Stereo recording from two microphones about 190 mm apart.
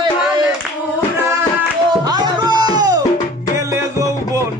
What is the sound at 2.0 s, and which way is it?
Music, 20° right (ahead or behind).